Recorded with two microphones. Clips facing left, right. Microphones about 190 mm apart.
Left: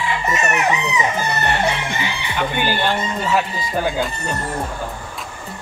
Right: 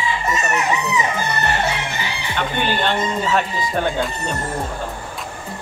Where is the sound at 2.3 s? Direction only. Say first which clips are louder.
Even; 5° left (ahead or behind).